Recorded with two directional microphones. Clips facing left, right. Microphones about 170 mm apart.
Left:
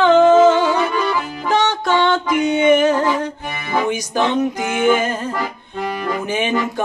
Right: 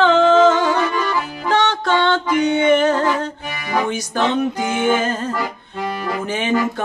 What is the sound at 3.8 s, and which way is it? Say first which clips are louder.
Music: left 3 dB; 15° left (ahead or behind).